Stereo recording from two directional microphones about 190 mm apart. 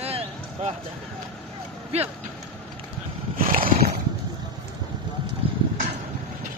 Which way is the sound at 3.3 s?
45° right (ahead or behind).